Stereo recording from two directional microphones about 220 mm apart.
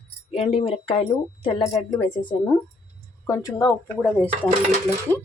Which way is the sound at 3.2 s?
15° left (ahead or behind).